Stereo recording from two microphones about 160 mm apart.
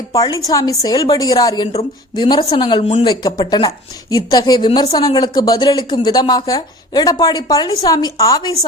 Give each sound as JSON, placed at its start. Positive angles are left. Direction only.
{"t": 0.1, "sound": "a woman's voice", "side_deg": 20}